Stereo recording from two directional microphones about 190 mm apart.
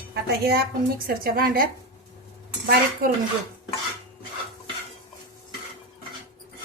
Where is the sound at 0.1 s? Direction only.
55° right (ahead or behind).